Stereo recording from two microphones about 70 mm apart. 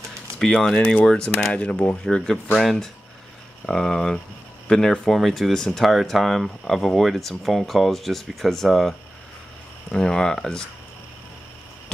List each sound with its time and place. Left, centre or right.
0.4 s speech: centre